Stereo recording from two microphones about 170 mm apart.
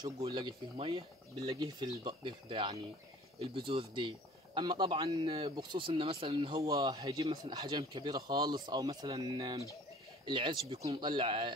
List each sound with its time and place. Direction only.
0.2 s speech: 30° right (ahead or behind)
6.6 s speech: 20° right (ahead or behind)